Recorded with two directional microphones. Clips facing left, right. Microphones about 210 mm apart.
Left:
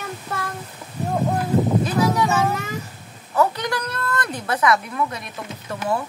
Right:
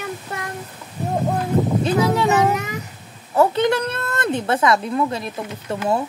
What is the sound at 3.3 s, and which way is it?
A woman's voice, 25° right (ahead or behind).